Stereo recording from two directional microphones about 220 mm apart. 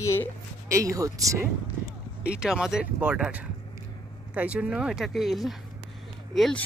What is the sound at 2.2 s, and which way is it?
Speech, 5° right (ahead or behind).